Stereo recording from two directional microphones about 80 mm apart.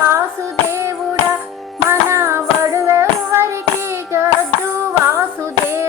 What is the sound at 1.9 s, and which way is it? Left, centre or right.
Music, right.